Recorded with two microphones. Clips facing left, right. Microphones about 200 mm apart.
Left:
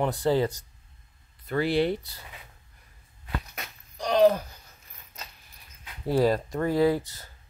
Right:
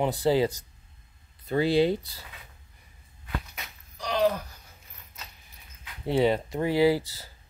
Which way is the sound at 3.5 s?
40° left (ahead or behind).